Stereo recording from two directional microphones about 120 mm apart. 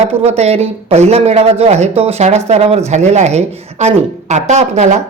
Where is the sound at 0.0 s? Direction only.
60° right (ahead or behind).